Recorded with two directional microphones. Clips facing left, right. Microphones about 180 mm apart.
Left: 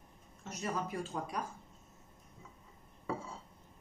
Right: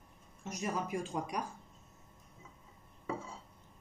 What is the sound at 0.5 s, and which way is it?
Speech, 10° right (ahead or behind).